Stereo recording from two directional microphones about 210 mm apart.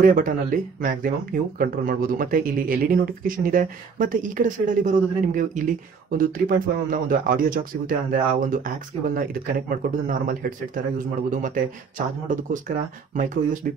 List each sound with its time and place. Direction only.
0.0 s speech: 40° right (ahead or behind)